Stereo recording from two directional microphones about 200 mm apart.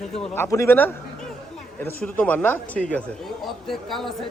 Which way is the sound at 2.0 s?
5° left (ahead or behind).